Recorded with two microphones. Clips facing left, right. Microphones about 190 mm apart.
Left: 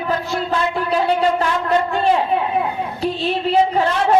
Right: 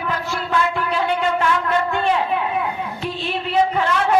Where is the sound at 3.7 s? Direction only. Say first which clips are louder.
Left 2 dB; 35° left (ahead or behind).